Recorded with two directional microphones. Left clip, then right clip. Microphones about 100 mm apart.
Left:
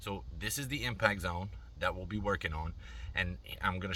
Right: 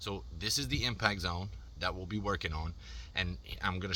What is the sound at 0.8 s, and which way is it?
Speech, 35° right (ahead or behind).